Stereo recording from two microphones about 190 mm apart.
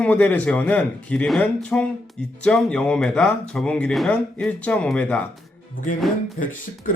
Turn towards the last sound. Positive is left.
turn(degrees=45)  # may be behind; listen again after turning